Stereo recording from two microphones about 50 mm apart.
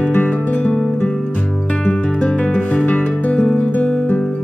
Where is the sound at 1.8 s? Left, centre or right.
Left.